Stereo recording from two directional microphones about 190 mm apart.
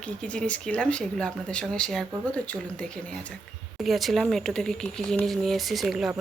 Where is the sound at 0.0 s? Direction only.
5° left (ahead or behind).